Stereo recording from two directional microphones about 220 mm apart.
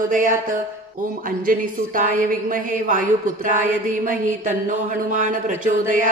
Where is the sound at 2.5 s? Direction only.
35° right (ahead or behind).